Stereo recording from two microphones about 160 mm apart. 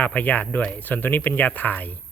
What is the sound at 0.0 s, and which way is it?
Speech, 10° left (ahead or behind).